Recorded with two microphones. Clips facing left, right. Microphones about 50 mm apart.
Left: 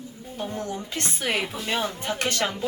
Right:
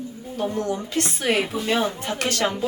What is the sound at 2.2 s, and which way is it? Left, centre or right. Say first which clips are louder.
Speech: right 1 dB; left.